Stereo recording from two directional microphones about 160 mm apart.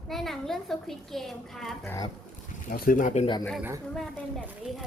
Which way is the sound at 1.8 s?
20° left (ahead or behind).